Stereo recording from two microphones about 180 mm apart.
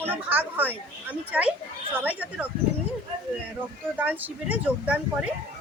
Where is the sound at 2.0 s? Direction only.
10° right (ahead or behind).